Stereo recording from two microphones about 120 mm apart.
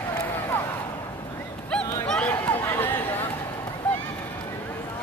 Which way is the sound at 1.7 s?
10° left (ahead or behind).